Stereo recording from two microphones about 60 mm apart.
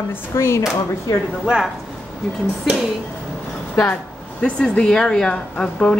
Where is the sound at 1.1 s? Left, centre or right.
Left.